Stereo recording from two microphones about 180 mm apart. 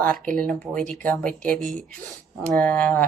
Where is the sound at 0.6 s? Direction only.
5° left (ahead or behind).